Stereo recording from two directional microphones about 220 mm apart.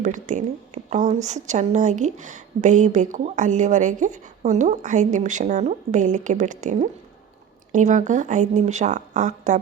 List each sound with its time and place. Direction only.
0.0 s speech: 35° right (ahead or behind)